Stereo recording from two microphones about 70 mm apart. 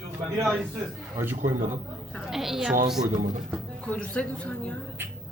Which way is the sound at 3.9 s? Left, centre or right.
Centre.